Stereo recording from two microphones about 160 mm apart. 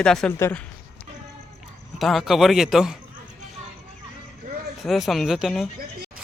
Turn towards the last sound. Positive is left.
turn(degrees=0)  # may be behind; listen again after turning